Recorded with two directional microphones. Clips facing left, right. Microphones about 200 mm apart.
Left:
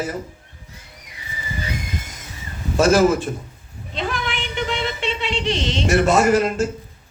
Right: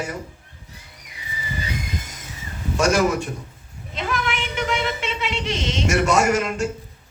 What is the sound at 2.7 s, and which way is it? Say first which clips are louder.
Speech: left 4 dB; 35° left (ahead or behind).